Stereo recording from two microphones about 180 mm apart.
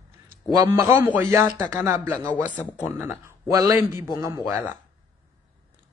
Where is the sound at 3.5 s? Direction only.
20° right (ahead or behind).